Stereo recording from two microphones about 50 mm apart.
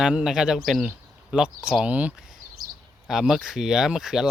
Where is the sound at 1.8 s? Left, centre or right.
Right.